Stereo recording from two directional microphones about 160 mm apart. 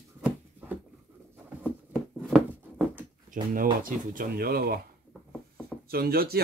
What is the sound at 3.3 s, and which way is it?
Speech, 55° right (ahead or behind).